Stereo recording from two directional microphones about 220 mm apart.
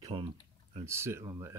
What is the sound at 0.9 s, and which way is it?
Speech, 10° right (ahead or behind).